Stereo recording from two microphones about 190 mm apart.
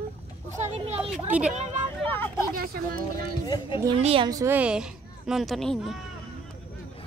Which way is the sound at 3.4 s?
20° left (ahead or behind).